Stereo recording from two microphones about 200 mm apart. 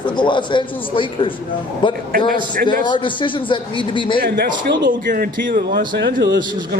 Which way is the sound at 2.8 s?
25° left (ahead or behind).